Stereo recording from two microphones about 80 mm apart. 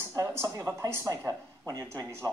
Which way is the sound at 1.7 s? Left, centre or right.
Right.